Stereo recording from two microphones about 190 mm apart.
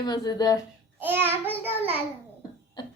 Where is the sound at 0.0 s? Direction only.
20° left (ahead or behind).